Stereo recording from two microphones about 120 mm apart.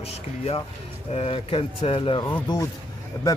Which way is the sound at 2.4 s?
35° left (ahead or behind).